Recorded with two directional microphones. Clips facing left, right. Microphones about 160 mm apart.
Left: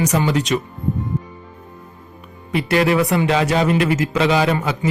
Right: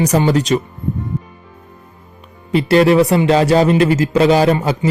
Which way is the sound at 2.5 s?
30° right (ahead or behind).